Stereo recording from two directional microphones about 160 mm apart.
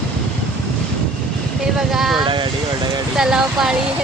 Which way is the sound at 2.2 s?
30° right (ahead or behind).